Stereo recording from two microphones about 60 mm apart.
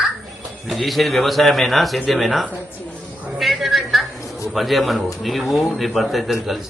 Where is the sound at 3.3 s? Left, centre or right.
Centre.